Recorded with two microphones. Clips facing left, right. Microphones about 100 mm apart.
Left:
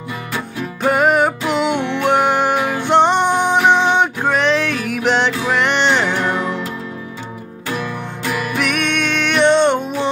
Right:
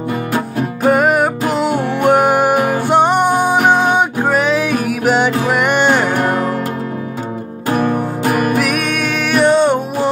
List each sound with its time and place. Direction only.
0.8 s music: 5° right (ahead or behind)
1.7 s music: 40° right (ahead or behind)
2.0 s music: 5° right (ahead or behind)
2.5 s music: 50° right (ahead or behind)
2.9 s music: 10° right (ahead or behind)
3.5 s music: 45° right (ahead or behind)
3.9 s music: 10° right (ahead or behind)
6.0 s music: 45° right (ahead or behind)
7.7 s music: 45° right (ahead or behind)
8.5 s music: 5° right (ahead or behind)